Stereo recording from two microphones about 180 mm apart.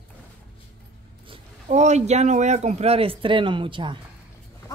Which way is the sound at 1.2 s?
40° right (ahead or behind).